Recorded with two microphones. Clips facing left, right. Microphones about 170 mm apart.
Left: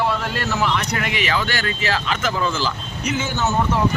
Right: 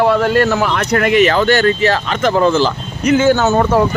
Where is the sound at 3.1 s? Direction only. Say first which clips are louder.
Right 11 dB; 70° right (ahead or behind).